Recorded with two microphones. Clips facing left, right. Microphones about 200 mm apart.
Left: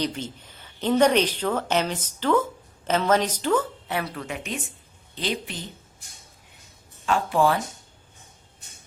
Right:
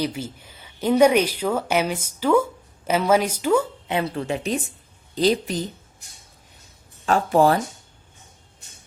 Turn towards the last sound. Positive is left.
turn(degrees=-40)  # may be behind; listen again after turning